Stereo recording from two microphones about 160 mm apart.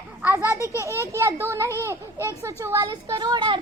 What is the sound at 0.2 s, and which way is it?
Children playing, 10° right (ahead or behind).